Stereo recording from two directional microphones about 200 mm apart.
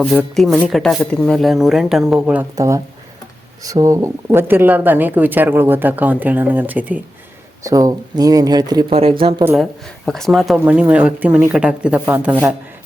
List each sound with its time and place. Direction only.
0.0 s speech: 5° left (ahead or behind); by 9.4 s 25° right (ahead or behind)
9.4 s speech: 10° right (ahead or behind)
10.1 s speech: centre (ahead or behind)